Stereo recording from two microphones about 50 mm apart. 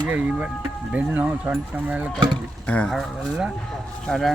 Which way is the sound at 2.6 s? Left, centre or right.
Left.